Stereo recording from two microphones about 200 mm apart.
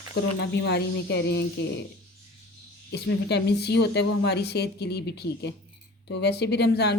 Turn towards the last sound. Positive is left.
turn(degrees=55)  # may be behind; listen again after turning